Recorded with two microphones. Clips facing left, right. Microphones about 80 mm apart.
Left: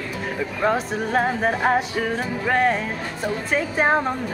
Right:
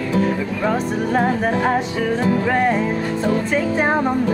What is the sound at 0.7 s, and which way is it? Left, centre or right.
Music, centre.